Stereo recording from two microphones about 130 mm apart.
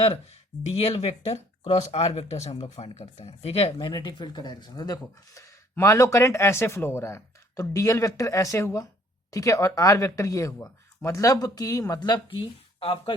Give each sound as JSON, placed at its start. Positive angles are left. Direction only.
{"t": 0.9, "sound": "speech", "side_deg": 50}
{"t": 3.8, "sound": "speech", "side_deg": 35}